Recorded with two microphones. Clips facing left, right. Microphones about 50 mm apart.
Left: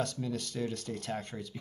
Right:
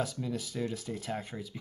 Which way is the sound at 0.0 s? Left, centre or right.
Centre.